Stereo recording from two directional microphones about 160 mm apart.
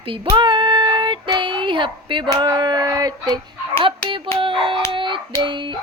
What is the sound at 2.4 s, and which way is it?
Speech, 25° right (ahead or behind).